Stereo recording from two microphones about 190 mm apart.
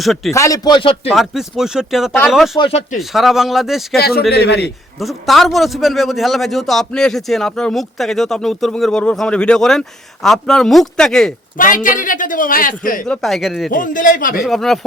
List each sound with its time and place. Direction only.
0.0 s a man's voice: centre (ahead or behind)
0.3 s a man's voice: 15° left (ahead or behind)
1.1 s a man's voice: centre (ahead or behind)
2.6 s a man's voice: 25° left (ahead or behind)
3.0 s a man's voice: centre (ahead or behind)
3.9 s a man's voice: 55° left (ahead or behind)
4.9 s a man's voice: centre (ahead or behind)
11.5 s a man's voice: 45° left (ahead or behind)
13.1 s a man's voice: centre (ahead or behind)
13.7 s a man's voice: 45° left (ahead or behind)
14.4 s a man's voice: centre (ahead or behind)